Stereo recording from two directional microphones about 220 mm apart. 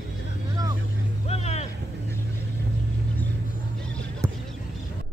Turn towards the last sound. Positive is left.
turn(degrees=-15)  # may be behind; listen again after turning